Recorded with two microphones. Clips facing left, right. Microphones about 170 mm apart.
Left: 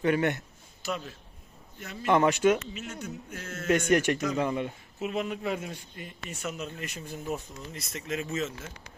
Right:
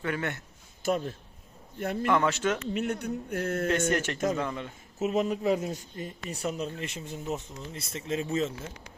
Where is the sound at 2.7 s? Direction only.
60° right (ahead or behind).